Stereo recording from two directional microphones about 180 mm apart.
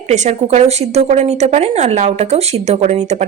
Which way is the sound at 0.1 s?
40° right (ahead or behind).